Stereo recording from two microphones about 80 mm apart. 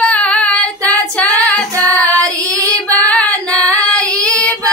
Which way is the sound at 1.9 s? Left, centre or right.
Right.